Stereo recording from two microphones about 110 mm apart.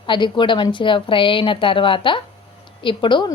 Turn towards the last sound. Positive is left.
turn(degrees=50)  # may be behind; listen again after turning